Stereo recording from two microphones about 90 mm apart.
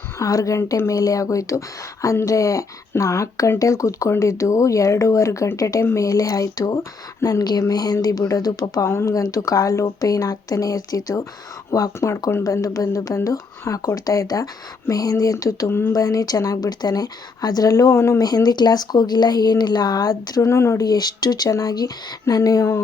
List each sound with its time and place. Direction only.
0.2 s a woman's voice: 40° left (ahead or behind)
8.9 s speech: 30° left (ahead or behind)
15.9 s a woman's voice: 40° left (ahead or behind)
18.2 s a woman's voice: 45° left (ahead or behind); by 20.8 s 30° left (ahead or behind)
20.8 s a woman's voice: 45° left (ahead or behind)